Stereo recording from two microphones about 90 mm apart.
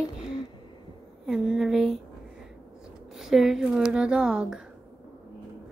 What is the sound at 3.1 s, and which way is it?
Speech, 5° right (ahead or behind).